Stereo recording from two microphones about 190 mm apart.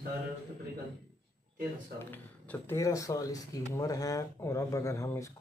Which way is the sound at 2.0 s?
10° left (ahead or behind).